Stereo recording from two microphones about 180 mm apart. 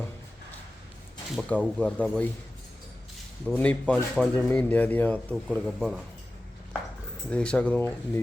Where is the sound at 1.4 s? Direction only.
5° left (ahead or behind).